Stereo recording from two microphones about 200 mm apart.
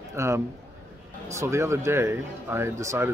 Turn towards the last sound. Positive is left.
turn(degrees=-15)  # may be behind; listen again after turning